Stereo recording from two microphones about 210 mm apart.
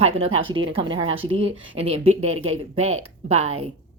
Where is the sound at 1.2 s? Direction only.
65° right (ahead or behind).